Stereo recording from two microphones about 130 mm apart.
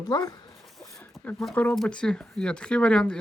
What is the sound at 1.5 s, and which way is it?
Speech, 10° left (ahead or behind).